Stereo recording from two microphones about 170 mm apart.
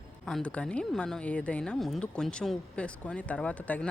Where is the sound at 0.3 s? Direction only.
5° left (ahead or behind).